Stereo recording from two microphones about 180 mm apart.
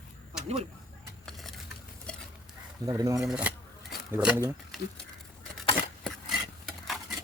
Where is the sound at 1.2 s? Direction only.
Centre (ahead or behind).